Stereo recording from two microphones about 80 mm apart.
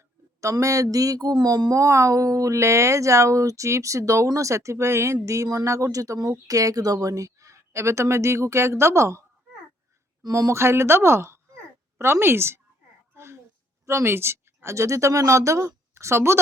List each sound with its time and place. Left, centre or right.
0.4 s speech: right
1.8 s a woman's voice: right
10.2 s a woman's voice: right
13.1 s a sound: right
13.8 s speech: right